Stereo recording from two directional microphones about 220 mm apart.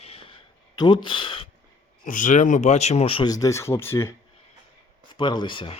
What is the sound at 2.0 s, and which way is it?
Speech, 35° left (ahead or behind).